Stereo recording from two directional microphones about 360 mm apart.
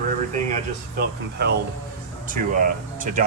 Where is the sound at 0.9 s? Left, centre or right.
Right.